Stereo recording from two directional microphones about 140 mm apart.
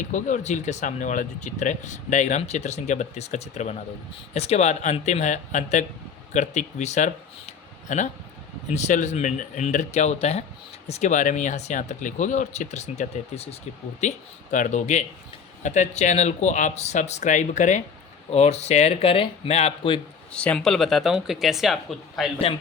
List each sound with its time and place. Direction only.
0.1 s speech: 60° left (ahead or behind)
14.5 s speech: 65° left (ahead or behind); by 20.0 s 40° left (ahead or behind)
20.3 s speech: 10° left (ahead or behind)